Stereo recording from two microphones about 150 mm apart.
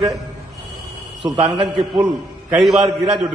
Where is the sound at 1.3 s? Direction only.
Centre (ahead or behind).